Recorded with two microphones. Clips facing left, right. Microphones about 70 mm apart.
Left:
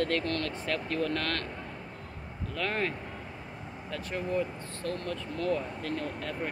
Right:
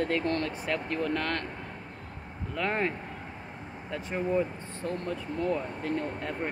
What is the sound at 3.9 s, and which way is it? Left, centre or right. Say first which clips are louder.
Speech: right 3 dB; centre.